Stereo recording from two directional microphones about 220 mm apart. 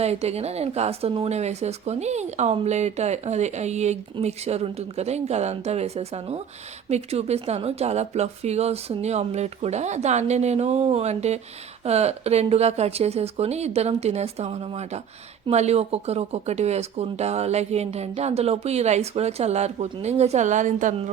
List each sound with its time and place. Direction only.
0.0 s speech: 30° right (ahead or behind)